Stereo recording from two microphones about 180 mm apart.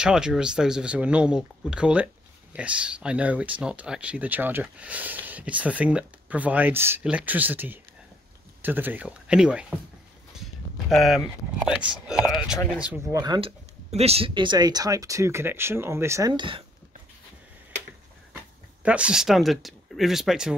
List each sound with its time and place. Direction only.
0.0 s speech: 5° right (ahead or behind)
13.2 s speech: 25° right (ahead or behind)
13.8 s speech: 35° right (ahead or behind)
18.8 s speech: 5° right (ahead or behind)